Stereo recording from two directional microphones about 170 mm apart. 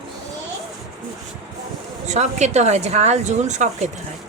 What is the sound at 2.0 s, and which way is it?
A woman's voice, 40° right (ahead or behind).